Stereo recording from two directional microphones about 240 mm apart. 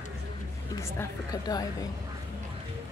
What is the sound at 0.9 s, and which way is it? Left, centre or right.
Speech, centre.